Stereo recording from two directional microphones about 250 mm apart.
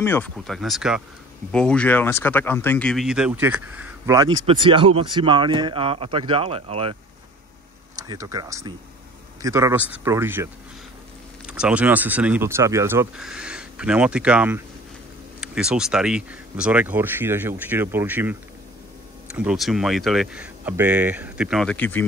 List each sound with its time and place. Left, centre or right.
0.0 s speech: centre